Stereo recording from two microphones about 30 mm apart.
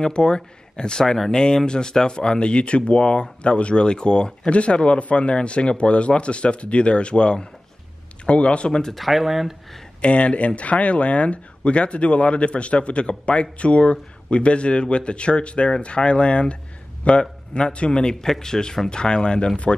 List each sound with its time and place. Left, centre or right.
0.0 s speech: left
1.0 s speech: centre
1.3 s speech: left
8.9 s speech: centre
10.0 s speech: left
18.2 s speech: centre